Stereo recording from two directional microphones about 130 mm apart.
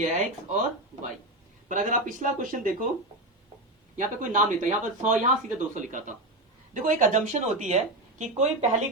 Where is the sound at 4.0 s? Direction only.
75° right (ahead or behind).